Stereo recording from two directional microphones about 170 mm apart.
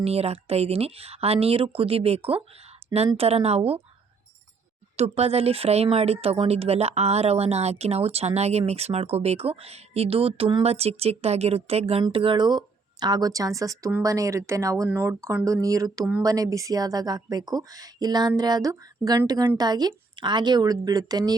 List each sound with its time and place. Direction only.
0.0 s speech: 35° right (ahead or behind)
4.9 s speech: 40° right (ahead or behind); by 21.3 s 20° right (ahead or behind)